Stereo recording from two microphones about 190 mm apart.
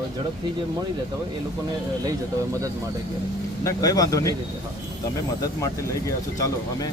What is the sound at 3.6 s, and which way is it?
Speech, 15° left (ahead or behind).